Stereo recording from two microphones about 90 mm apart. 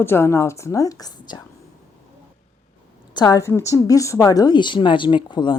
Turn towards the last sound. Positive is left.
turn(degrees=55)  # may be behind; listen again after turning